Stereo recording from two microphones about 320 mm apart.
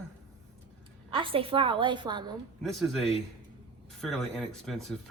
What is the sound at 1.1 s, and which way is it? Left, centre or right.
A woman's voice, centre.